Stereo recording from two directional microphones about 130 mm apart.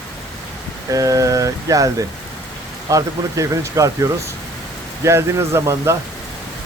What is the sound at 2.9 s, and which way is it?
Speech, 25° right (ahead or behind).